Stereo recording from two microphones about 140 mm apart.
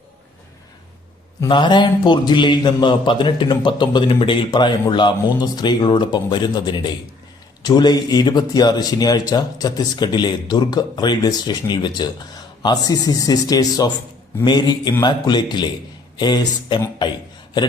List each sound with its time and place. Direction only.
1.5 s a man's voice: 35° left (ahead or behind)